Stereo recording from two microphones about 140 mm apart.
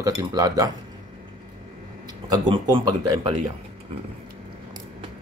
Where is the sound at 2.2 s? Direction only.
30° right (ahead or behind).